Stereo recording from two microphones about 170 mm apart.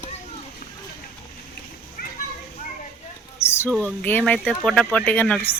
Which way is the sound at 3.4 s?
35° left (ahead or behind).